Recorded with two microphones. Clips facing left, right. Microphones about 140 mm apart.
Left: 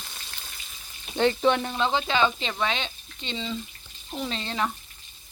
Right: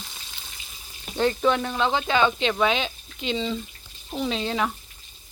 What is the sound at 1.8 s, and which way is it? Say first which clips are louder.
Speech: right 2 dB; 5° right (ahead or behind).